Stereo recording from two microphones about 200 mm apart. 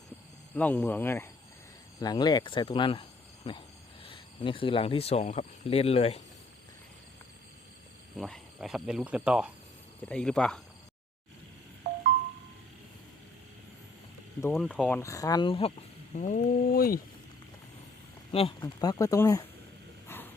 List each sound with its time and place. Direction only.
0.5 s speech: 5° left (ahead or behind); by 6.2 s 30° left (ahead or behind)
8.1 s speech: centre (ahead or behind)
14.6 s speech: centre (ahead or behind); by 15.7 s 25° left (ahead or behind)
16.1 s speech: 40° left (ahead or behind)
18.3 s speech: 25° left (ahead or behind)
20.1 s a sound: 10° left (ahead or behind)